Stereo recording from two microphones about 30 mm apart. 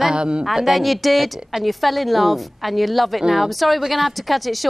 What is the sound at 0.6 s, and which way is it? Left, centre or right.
A woman's voice, centre.